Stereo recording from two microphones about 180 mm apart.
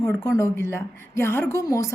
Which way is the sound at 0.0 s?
15° left (ahead or behind).